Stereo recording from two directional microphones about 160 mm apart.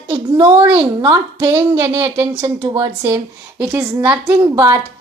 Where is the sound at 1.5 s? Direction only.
15° right (ahead or behind).